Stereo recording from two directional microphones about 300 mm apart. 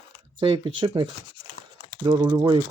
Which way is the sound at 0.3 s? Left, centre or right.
Centre.